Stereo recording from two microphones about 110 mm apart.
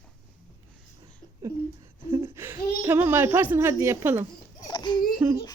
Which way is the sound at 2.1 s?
25° right (ahead or behind).